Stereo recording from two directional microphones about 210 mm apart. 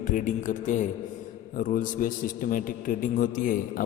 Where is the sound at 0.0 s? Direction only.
40° left (ahead or behind).